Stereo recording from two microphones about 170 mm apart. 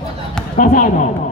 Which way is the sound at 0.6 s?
50° left (ahead or behind).